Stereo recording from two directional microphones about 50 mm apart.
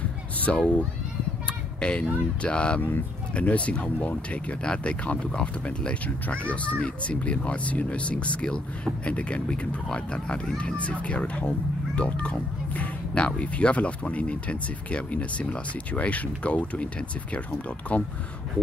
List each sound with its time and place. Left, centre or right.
0.6 s speech: left